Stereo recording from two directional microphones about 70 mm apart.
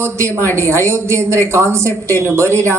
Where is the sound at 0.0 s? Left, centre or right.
Right.